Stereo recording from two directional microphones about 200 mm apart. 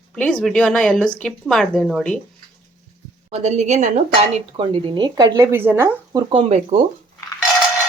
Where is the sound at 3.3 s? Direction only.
35° right (ahead or behind).